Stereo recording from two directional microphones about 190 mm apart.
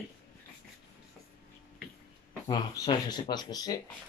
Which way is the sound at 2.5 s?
25° left (ahead or behind).